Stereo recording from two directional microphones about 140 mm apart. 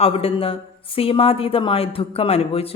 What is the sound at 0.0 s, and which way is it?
A woman's voice, 45° left (ahead or behind).